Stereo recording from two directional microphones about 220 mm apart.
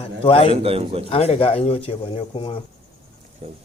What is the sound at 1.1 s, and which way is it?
Speech, 25° left (ahead or behind).